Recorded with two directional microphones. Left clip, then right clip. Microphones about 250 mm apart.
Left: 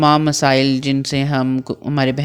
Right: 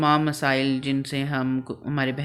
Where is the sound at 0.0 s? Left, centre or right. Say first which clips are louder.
Left 7 dB; left.